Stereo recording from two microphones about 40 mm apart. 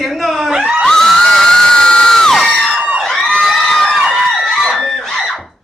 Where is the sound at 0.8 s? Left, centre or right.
Centre.